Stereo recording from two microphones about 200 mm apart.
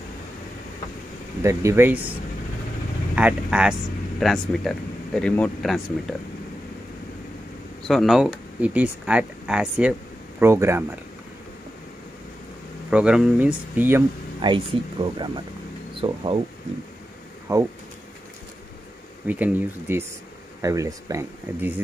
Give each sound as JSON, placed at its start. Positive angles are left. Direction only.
{"t": 1.4, "sound": "speech", "side_deg": -15}
{"t": 3.2, "sound": "speech", "side_deg": -5}
{"t": 7.8, "sound": "speech", "side_deg": 0}
{"t": 12.9, "sound": "speech", "side_deg": -5}
{"t": 14.4, "sound": "speech", "side_deg": -25}
{"t": 17.5, "sound": "speech", "side_deg": -15}
{"t": 19.2, "sound": "speech", "side_deg": -10}